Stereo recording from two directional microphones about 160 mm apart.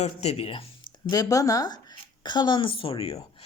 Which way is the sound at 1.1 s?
20° left (ahead or behind).